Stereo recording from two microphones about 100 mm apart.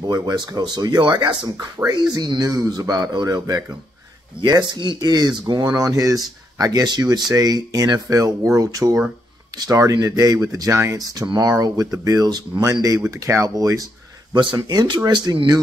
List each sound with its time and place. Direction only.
0.0 s speech: 40° right (ahead or behind)
1.8 s speech: 35° right (ahead or behind)
14.3 s speech: 50° right (ahead or behind)